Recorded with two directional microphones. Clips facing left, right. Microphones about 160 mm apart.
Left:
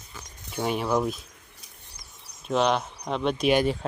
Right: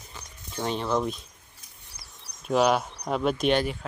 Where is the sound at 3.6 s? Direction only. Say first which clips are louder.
Left 5 dB; 30° left (ahead or behind).